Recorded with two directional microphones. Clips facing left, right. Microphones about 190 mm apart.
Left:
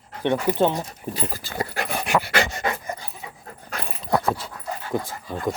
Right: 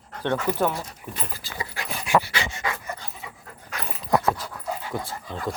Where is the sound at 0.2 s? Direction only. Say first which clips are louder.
Left 4 dB; 15° left (ahead or behind).